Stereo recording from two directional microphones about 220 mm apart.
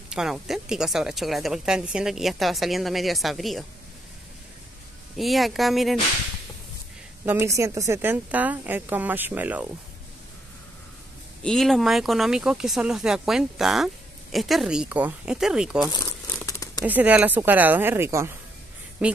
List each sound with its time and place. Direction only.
0.1 s a woman's voice: centre (ahead or behind)
5.1 s a woman's voice: centre (ahead or behind)
7.2 s a woman's voice: 10° right (ahead or behind)
11.4 s a woman's voice: centre (ahead or behind)
15.9 s crumpling: 15° left (ahead or behind)
16.8 s a woman's voice: 5° right (ahead or behind)